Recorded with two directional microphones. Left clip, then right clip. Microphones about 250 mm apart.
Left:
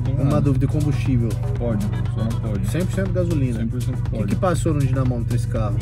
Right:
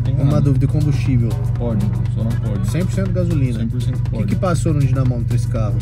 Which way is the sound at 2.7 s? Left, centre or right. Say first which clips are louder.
Even; centre.